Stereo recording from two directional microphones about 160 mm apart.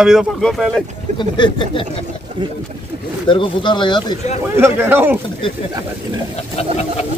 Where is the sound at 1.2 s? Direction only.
30° left (ahead or behind).